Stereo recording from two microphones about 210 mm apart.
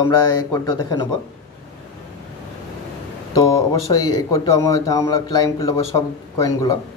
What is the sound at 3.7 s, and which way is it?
A man's voice, 15° left (ahead or behind).